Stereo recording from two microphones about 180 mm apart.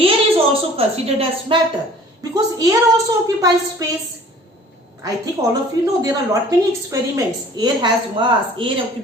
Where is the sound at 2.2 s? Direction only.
20° right (ahead or behind).